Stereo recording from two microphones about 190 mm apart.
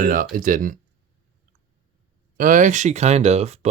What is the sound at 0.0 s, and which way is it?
Speech, 45° right (ahead or behind).